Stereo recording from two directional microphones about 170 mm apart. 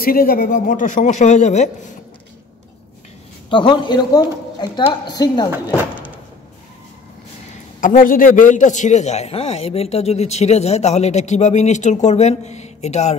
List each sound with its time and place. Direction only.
0.0 s speech: 60° left (ahead or behind); by 1.7 s 45° left (ahead or behind)
3.4 s a woman's voice: 30° left (ahead or behind)
7.8 s a man's voice: 55° left (ahead or behind)